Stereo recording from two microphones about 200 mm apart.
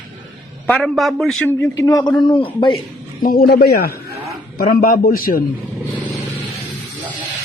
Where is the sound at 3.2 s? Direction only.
50° left (ahead or behind).